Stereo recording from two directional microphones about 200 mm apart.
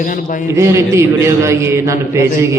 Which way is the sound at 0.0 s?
40° left (ahead or behind).